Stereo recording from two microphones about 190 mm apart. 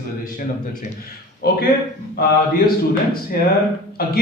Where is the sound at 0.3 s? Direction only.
45° left (ahead or behind).